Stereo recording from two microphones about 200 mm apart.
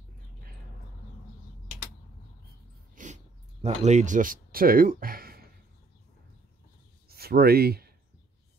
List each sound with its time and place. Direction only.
3.0 s dog: 40° right (ahead or behind)
3.6 s speech: 35° right (ahead or behind)
7.1 s speech: 50° right (ahead or behind)